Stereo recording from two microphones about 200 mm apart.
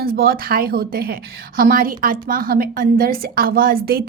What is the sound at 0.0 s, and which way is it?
A woman's voice, 50° right (ahead or behind).